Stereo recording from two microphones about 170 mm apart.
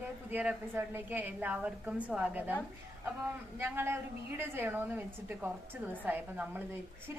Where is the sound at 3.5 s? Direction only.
15° right (ahead or behind).